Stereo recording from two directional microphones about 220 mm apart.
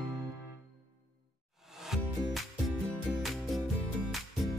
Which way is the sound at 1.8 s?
Centre (ahead or behind).